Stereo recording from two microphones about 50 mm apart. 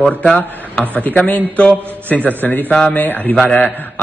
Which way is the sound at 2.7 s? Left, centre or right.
Left.